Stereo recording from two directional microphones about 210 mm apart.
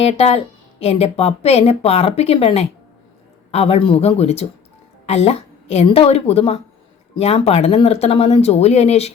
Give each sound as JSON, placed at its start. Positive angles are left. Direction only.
{"t": 0.0, "sound": "speech", "side_deg": 30}